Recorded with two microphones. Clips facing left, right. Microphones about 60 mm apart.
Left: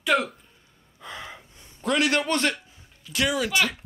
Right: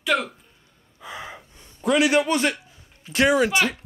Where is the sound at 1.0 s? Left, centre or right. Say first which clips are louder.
Right 2 dB; centre.